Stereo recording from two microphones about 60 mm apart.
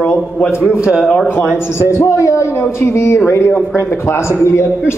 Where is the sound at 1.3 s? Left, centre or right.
Left.